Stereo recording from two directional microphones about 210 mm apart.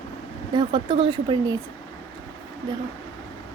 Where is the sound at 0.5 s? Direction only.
20° right (ahead or behind).